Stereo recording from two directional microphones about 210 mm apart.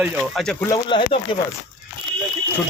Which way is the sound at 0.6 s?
20° left (ahead or behind).